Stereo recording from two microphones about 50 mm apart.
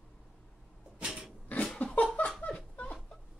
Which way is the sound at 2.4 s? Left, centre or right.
Left.